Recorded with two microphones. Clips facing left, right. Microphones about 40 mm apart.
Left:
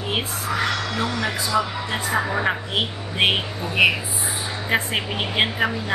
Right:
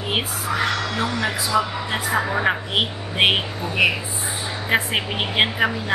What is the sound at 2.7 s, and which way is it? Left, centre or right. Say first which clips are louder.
A woman's voice: right 2 dB; right.